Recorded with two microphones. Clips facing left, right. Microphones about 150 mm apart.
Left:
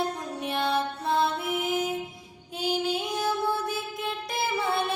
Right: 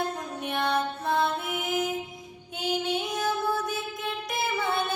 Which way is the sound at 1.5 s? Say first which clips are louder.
Left 1 dB; 30° left (ahead or behind).